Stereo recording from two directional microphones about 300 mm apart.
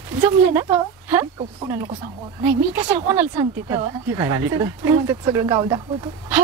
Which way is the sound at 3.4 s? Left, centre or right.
Centre.